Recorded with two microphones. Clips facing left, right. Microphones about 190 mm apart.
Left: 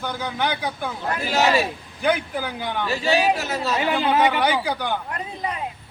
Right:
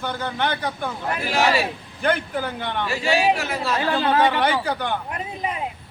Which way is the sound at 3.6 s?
20° left (ahead or behind).